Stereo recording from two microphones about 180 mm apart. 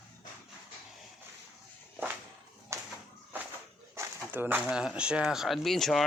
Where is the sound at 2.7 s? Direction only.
15° right (ahead or behind).